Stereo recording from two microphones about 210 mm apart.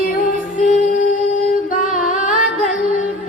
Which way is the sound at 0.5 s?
40° left (ahead or behind).